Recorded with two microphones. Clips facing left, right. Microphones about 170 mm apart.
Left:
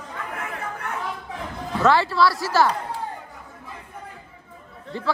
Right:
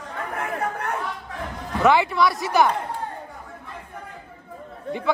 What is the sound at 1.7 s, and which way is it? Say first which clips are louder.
A man's voice: right 1 dB; 15° right (ahead or behind).